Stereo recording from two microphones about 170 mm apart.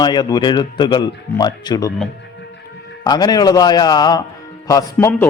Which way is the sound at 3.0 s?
25° left (ahead or behind).